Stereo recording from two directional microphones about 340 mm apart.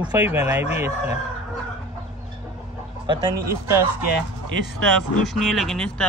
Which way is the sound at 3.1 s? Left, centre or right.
Centre.